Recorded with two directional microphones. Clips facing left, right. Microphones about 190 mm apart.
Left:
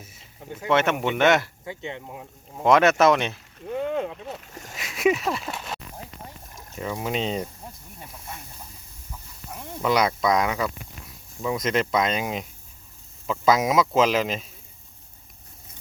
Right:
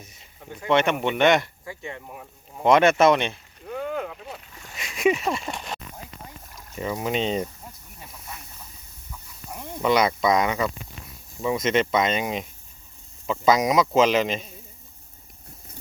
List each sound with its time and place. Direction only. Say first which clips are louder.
0.7 s a man's voice: right 1 dB; 5° left (ahead or behind)
1.6 s speech: left 2 dB; 20° left (ahead or behind)
2.6 s a man's voice: right 1 dB; centre (ahead or behind)
3.7 s boat: left 3 dB; 25° left (ahead or behind)
4.5 s splash: left 4 dB; 45° left (ahead or behind)
4.8 s speech: even; centre (ahead or behind)
6.5 s a sound: left 1 dB; 25° left (ahead or behind)
6.7 s a man's voice: right 2 dB; centre (ahead or behind)
9.5 s a sound: right 1 dB; 15° right (ahead or behind)
9.8 s a man's voice: right 1 dB; centre (ahead or behind)